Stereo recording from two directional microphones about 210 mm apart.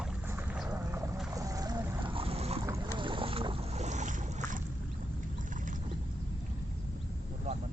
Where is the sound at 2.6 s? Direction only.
15° right (ahead or behind); by 4.6 s 35° right (ahead or behind).